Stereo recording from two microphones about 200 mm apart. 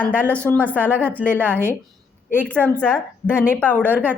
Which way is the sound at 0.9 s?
10° right (ahead or behind).